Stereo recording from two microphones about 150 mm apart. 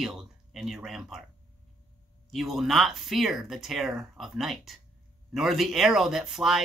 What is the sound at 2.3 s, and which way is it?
Speech, centre (ahead or behind).